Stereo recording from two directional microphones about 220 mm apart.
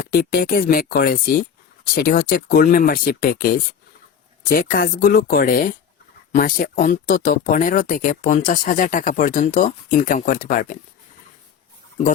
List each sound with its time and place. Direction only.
0.1 s speech: 45° left (ahead or behind)